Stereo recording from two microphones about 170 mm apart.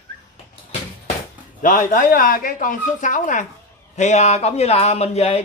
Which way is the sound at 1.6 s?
50° left (ahead or behind).